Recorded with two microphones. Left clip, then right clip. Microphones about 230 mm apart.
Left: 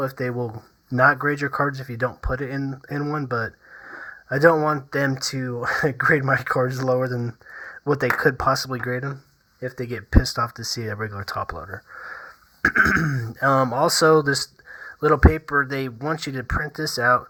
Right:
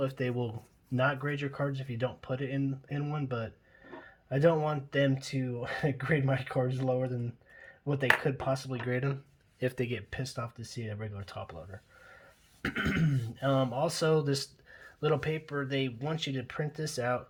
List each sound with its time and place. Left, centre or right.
0.0 s speech: centre
8.9 s speech: centre
10.2 s speech: left